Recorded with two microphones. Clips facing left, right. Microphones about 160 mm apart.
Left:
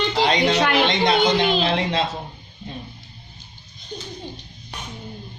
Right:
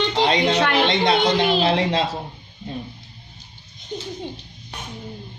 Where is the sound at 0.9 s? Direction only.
30° right (ahead or behind).